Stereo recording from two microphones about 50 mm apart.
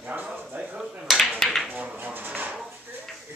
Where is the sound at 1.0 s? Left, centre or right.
Centre.